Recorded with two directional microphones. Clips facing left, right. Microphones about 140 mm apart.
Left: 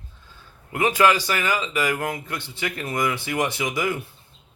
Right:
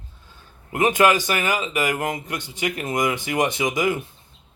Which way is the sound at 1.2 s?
20° right (ahead or behind).